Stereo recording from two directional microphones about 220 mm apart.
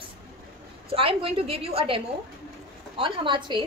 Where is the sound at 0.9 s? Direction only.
25° right (ahead or behind).